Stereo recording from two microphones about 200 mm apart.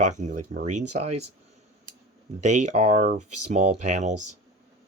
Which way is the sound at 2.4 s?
35° right (ahead or behind).